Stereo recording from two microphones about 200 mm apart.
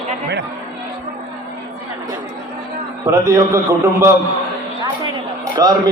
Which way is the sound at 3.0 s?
15° right (ahead or behind).